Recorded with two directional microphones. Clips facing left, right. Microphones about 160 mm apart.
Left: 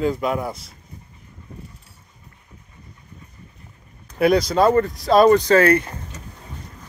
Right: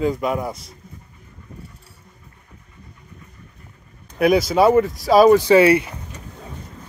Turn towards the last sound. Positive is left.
turn(degrees=-10)  # may be behind; listen again after turning